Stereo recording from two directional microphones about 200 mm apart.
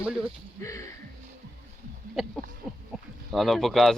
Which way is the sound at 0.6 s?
15° left (ahead or behind).